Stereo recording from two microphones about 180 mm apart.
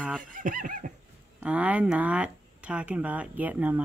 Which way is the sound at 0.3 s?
50° right (ahead or behind).